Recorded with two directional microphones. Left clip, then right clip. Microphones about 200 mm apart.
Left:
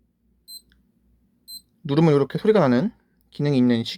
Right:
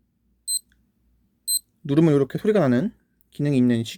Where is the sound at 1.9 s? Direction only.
25° right (ahead or behind).